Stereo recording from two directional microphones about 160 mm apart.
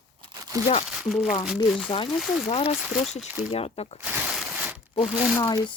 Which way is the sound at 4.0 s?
10° right (ahead or behind).